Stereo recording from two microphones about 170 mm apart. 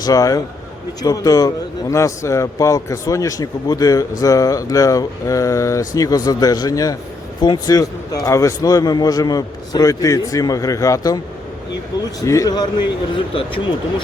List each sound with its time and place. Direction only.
0.0 s a man's voice: 20° left (ahead or behind)
12.2 s a man's voice: 20° left (ahead or behind)